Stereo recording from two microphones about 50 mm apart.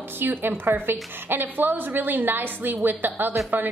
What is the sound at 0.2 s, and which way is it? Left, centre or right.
A woman's voice, right.